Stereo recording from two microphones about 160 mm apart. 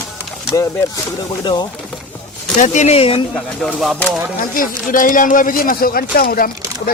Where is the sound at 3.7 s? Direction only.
Centre (ahead or behind).